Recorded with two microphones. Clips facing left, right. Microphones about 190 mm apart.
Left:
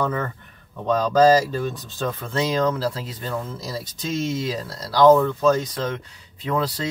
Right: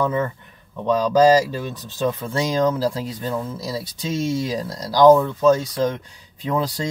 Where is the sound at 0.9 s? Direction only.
10° right (ahead or behind).